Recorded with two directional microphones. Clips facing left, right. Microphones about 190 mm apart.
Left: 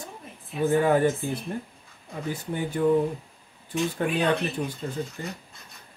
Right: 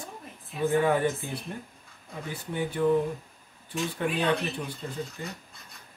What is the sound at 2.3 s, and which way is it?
Speech, 45° left (ahead or behind).